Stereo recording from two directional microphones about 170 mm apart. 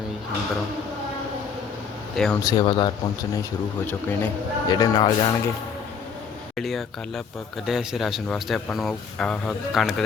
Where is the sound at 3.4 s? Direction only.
10° left (ahead or behind).